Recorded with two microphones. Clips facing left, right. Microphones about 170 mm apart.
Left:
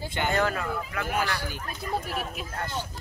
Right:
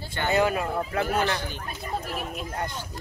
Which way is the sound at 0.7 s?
30° right (ahead or behind).